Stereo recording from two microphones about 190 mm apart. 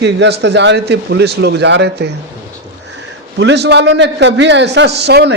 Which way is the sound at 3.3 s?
65° right (ahead or behind).